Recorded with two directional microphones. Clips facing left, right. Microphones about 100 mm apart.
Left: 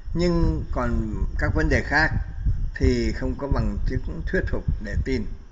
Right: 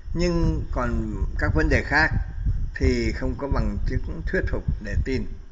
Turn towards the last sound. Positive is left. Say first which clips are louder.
# left 1 dB
turn(degrees=0)  # may be behind; listen again after turning